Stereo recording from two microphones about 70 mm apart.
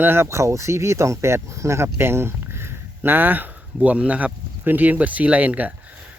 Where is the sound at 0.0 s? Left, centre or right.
Right.